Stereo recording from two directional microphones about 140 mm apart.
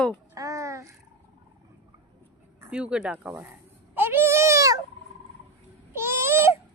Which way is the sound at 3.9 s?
15° right (ahead or behind).